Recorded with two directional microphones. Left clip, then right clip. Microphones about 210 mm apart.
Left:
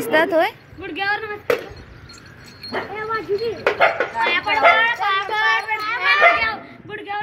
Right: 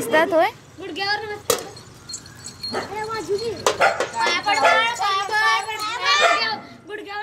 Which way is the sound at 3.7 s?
20° right (ahead or behind).